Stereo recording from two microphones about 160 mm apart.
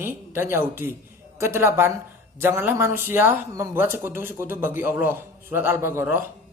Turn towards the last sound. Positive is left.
turn(degrees=-15)  # may be behind; listen again after turning